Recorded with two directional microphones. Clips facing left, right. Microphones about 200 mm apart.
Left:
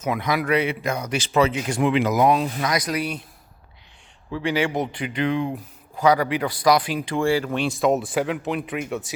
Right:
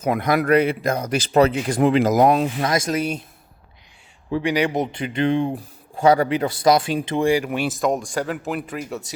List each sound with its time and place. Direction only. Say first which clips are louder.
0.0 s speech: right 4 dB; 55° right (ahead or behind)
2.8 s speech: right 3 dB; 25° right (ahead or behind)
4.3 s speech: right 3 dB; 15° right (ahead or behind); by 8.8 s centre (ahead or behind)